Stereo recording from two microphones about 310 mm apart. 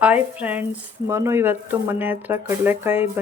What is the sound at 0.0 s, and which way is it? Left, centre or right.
Speech, centre.